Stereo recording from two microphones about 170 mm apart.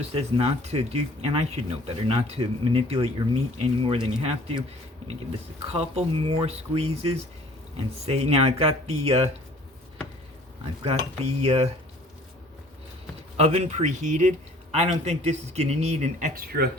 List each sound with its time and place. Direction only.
0.0 s speech: 35° right (ahead or behind)
5.7 s speech: 40° right (ahead or behind)
10.8 s speech: 40° right (ahead or behind)
13.3 s speech: 40° right (ahead or behind)
16.3 s speech: 60° right (ahead or behind)